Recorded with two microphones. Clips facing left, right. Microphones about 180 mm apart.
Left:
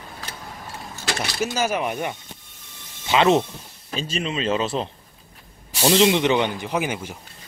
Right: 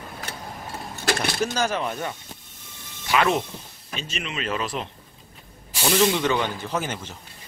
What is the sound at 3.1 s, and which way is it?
A man's voice, 25° left (ahead or behind).